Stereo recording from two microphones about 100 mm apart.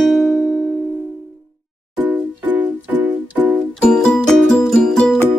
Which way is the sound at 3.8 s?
10° left (ahead or behind).